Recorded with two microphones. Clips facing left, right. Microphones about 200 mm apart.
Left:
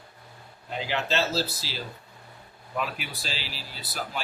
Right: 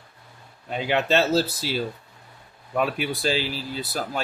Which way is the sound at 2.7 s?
55° right (ahead or behind).